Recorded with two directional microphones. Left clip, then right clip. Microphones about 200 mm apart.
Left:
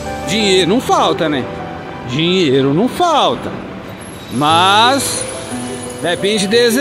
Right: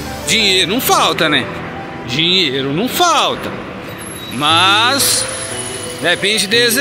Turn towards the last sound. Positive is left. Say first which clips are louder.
# even
turn(degrees=25)  # may be behind; listen again after turning